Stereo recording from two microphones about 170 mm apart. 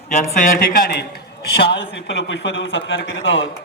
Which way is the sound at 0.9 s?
70° left (ahead or behind).